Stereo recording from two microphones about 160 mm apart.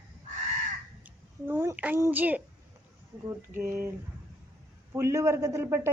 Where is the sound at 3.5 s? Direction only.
15° right (ahead or behind).